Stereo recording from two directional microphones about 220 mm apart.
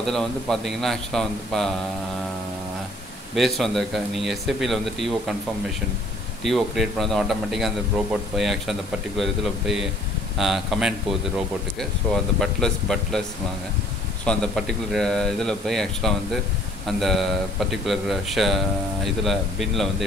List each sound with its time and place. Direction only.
0.0 s a man's voice: centre (ahead or behind)
3.3 s a man's voice: centre (ahead or behind)
6.4 s a man's voice: centre (ahead or behind)
14.2 s a man's voice: 5° left (ahead or behind)